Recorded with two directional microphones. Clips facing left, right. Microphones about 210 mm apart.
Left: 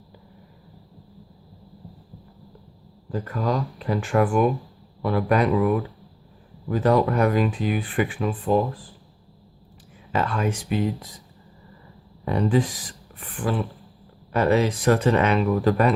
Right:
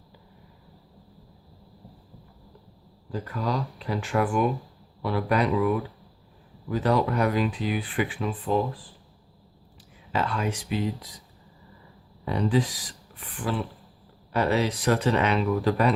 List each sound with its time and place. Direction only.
3.1 s speech: 50° left (ahead or behind)
10.1 s speech: 50° left (ahead or behind)
12.2 s speech: 50° left (ahead or behind)
14.3 s speech: 50° left (ahead or behind)